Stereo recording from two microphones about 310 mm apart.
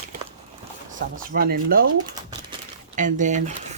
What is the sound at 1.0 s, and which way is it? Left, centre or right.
Speech, right.